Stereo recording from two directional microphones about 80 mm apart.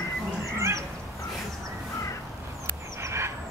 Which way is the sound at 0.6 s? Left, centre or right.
Right.